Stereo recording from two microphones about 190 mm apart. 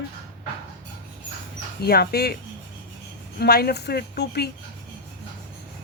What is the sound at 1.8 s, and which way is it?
Speech, 55° left (ahead or behind).